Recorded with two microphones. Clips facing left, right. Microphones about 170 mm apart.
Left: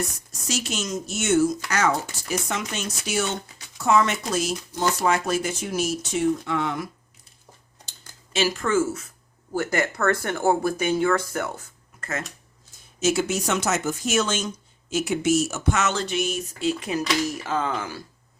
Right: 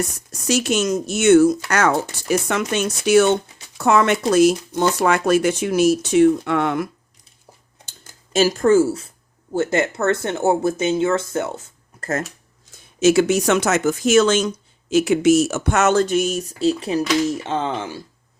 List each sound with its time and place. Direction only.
0.4 s speech: 65° right (ahead or behind)
8.3 s speech: 40° right (ahead or behind); by 11.7 s 25° right (ahead or behind)
11.9 s speech: 40° right (ahead or behind)
13.0 s speech: 75° right (ahead or behind); by 18.0 s 25° right (ahead or behind)